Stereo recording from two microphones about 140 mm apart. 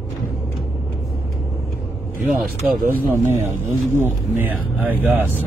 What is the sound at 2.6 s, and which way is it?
Speech, 10° right (ahead or behind).